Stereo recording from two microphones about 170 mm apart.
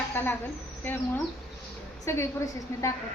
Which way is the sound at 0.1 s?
10° left (ahead or behind).